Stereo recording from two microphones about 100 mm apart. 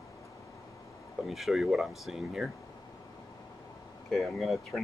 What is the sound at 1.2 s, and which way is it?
Speech, centre (ahead or behind).